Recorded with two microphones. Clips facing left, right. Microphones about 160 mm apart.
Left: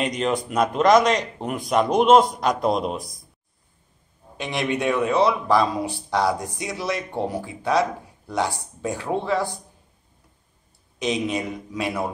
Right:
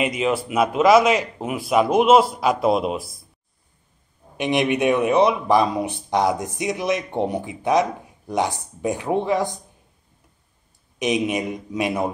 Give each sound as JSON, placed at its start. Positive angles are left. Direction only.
{"t": 0.0, "sound": "speech", "side_deg": -5}
{"t": 4.4, "sound": "speech", "side_deg": -20}
{"t": 11.0, "sound": "a man's voice", "side_deg": -15}